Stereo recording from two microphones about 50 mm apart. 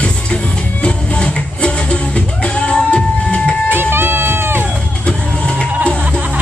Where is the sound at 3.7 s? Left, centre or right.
Right.